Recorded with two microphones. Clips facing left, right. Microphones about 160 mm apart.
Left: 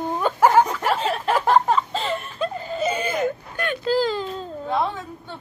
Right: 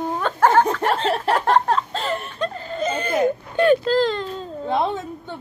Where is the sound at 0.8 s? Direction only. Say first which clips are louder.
Right 2 dB; 10° left (ahead or behind).